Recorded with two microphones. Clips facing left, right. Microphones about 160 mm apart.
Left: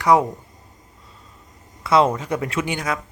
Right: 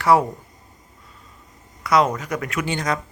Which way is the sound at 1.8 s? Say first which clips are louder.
Left 2 dB; 25° left (ahead or behind).